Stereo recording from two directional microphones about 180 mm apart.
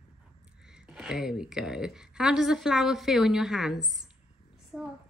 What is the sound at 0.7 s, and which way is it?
A woman's voice, 5° right (ahead or behind).